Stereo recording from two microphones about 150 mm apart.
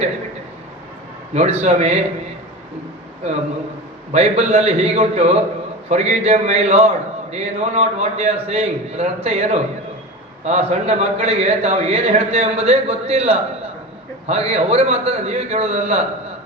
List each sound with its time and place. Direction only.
1.3 s a man's voice: 45° right (ahead or behind)
4.1 s a man's voice: 45° right (ahead or behind)